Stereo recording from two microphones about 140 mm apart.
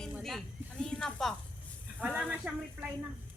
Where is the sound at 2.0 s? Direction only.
10° right (ahead or behind).